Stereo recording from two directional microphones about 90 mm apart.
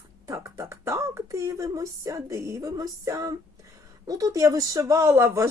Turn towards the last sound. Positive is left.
turn(degrees=-30)  # may be behind; listen again after turning